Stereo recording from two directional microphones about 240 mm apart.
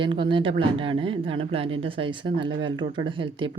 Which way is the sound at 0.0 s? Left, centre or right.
Right.